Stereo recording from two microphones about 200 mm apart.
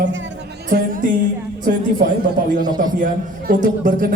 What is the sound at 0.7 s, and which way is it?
Music, 45° right (ahead or behind).